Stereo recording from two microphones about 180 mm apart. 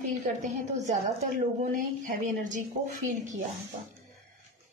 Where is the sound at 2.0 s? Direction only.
45° right (ahead or behind).